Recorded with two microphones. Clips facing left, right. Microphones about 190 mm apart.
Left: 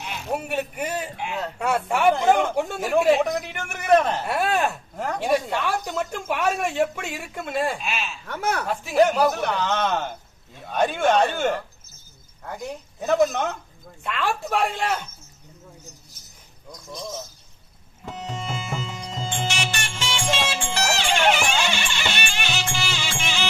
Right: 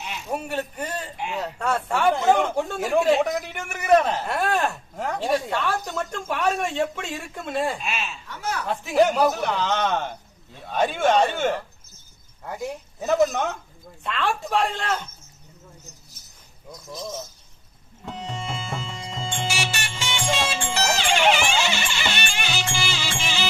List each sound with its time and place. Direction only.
0.4 s a man's voice: 10° left (ahead or behind)
4.9 s a man's voice: centre (ahead or behind)
5.2 s a man's voice: 10° left (ahead or behind)
8.3 s speech: 55° left (ahead or behind)
8.6 s a man's voice: 5° left (ahead or behind)
16.7 s a man's voice: centre (ahead or behind)
18.0 s tabla: 5° left (ahead or behind)
18.7 s music: 5° left (ahead or behind)
21.1 s music: centre (ahead or behind)